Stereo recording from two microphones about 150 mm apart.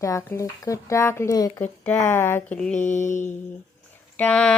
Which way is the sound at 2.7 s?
55° left (ahead or behind).